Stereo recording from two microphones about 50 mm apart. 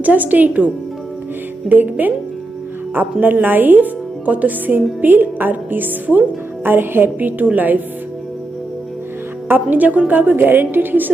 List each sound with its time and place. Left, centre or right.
0.0 s a woman's voice: right
1.7 s a woman's voice: right
9.5 s a woman's voice: right